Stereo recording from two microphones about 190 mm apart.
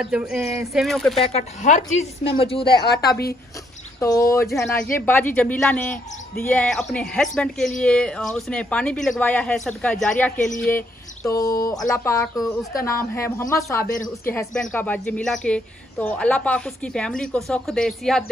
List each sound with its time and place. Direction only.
0.0 s speech: 5° right (ahead or behind)
1.2 s a woman's voice: 35° left (ahead or behind)
4.0 s speech: 15° left (ahead or behind)
4.5 s speech: centre (ahead or behind)
4.8 s speech: 10° left (ahead or behind)